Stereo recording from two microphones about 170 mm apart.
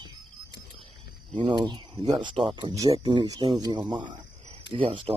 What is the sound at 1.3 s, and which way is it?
Speech, 30° right (ahead or behind).